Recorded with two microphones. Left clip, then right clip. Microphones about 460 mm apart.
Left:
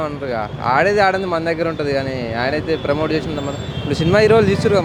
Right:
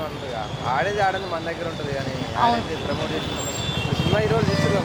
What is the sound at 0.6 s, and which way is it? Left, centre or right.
Speech, left.